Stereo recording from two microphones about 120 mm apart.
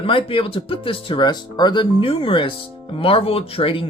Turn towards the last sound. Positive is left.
turn(degrees=50)  # may be behind; listen again after turning